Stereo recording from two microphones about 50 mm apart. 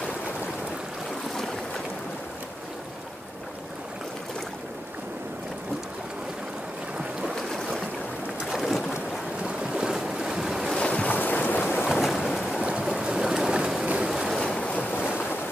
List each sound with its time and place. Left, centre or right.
7.0 s boat: centre
7.3 s boat: centre
8.4 s boat: centre
8.9 s boat: right
9.9 s waves: centre
10.8 s boat: left
11.1 s boat: left
11.9 s boat: centre
12.6 s stream: centre
14.0 s waves: centre
14.4 s waves: centre
14.8 s boat: left